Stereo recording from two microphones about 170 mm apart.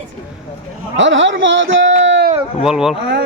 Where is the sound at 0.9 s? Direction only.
90° right.